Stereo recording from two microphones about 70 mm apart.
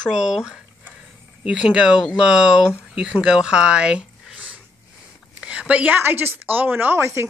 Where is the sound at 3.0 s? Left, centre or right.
Centre.